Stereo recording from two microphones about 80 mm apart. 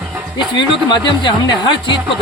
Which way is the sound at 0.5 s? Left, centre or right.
Left.